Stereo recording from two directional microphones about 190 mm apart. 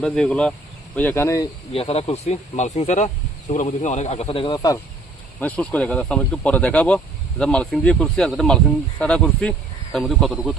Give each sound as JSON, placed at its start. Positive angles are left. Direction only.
{"t": 0.0, "sound": "speech", "side_deg": 5}
{"t": 1.7, "sound": "speech", "side_deg": 30}
{"t": 5.4, "sound": "speech", "side_deg": 5}